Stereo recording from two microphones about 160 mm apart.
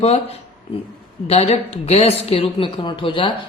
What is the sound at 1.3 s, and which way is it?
A woman's voice, 40° left (ahead or behind).